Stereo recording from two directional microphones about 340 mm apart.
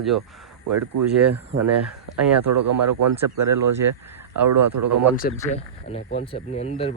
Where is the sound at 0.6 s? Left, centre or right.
Right.